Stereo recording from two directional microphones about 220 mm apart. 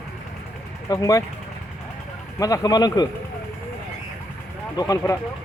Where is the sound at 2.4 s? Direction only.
15° left (ahead or behind).